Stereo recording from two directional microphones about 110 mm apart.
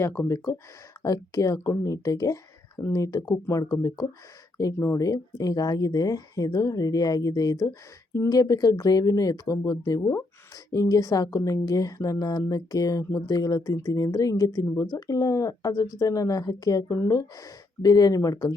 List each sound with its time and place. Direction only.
0.0 s speech: 25° left (ahead or behind)